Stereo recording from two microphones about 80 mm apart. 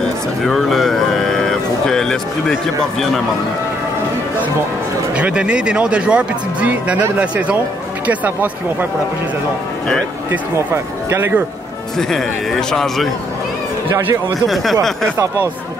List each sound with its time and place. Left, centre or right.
0.5 s speech: centre
5.1 s speech: centre
10.7 s speech: right
12.0 s a man's voice: centre
14.5 s a man's voice: centre